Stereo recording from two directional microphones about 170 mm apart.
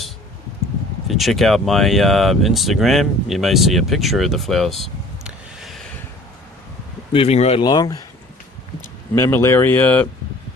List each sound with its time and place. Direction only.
1.0 s speech: centre (ahead or behind)
7.1 s speech: 35° left (ahead or behind)
7.6 s speech: 25° left (ahead or behind)
9.1 s speech: 15° left (ahead or behind)